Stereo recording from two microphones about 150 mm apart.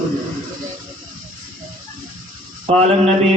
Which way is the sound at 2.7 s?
45° right (ahead or behind).